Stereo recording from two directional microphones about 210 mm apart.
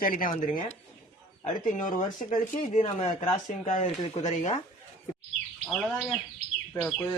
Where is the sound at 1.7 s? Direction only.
35° left (ahead or behind).